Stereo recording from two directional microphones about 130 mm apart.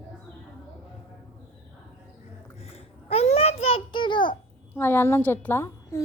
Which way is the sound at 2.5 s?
50° left (ahead or behind).